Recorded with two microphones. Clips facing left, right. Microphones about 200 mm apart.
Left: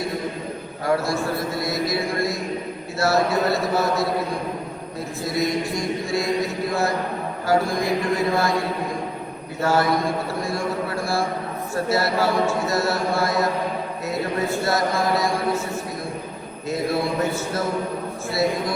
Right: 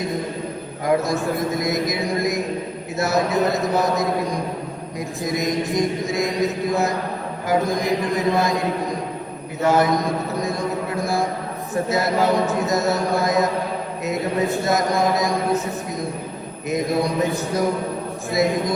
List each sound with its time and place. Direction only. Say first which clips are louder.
0.9 s a sound: right 2 dB; 20° right (ahead or behind)
3.0 s a man's voice: even; 20° right (ahead or behind)
16.6 s a man's voice: right 2 dB; 20° right (ahead or behind)